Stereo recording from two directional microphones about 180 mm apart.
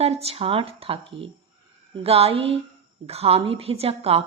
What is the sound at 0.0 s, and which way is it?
Speech, 35° right (ahead or behind).